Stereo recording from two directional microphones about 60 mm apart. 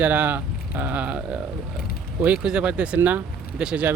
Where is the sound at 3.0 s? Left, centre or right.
Right.